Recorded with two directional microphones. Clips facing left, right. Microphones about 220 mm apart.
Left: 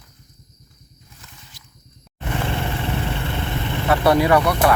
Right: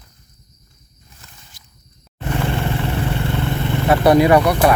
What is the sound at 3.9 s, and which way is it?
Speech, 15° right (ahead or behind).